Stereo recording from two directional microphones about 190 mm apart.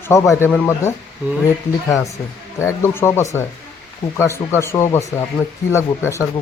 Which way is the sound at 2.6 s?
15° left (ahead or behind).